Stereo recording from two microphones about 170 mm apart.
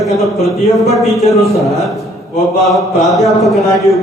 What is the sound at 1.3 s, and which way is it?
Speech, 20° left (ahead or behind).